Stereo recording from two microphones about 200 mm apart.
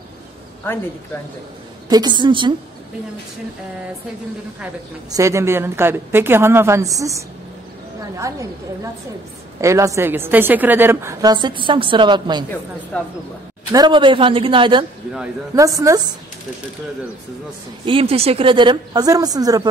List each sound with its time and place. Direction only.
1.9 s speech: 20° right (ahead or behind)
5.1 s a woman's voice: 15° right (ahead or behind)
12.9 s speech: 5° left (ahead or behind)
13.7 s a woman's voice: 20° right (ahead or behind)
17.8 s speech: 30° right (ahead or behind)